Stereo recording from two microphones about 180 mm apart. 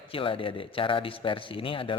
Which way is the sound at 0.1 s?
30° left (ahead or behind).